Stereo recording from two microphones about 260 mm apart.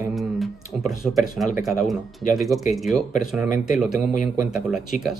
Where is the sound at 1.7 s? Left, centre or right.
Centre.